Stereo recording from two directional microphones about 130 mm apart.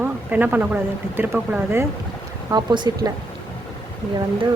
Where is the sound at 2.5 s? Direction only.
35° right (ahead or behind).